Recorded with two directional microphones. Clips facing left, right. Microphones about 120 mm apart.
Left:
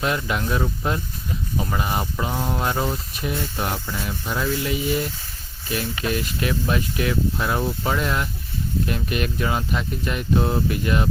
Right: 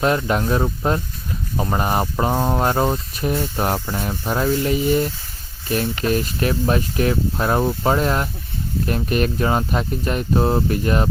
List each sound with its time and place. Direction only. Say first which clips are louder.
0.3 s speech: right 4 dB; 40° right (ahead or behind)